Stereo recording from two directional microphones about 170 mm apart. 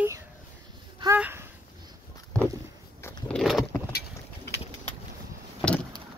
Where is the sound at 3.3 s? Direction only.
Centre (ahead or behind).